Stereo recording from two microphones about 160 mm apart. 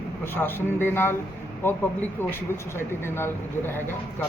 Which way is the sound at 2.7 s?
15° left (ahead or behind).